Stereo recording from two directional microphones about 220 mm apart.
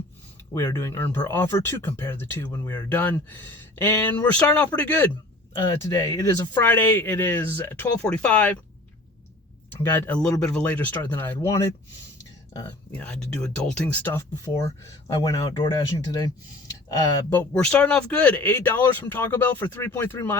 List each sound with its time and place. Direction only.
0.5 s speech: 15° left (ahead or behind)
5.5 s speech: 20° left (ahead or behind)
9.8 s speech: 10° left (ahead or behind)
12.9 s speech: 5° left (ahead or behind)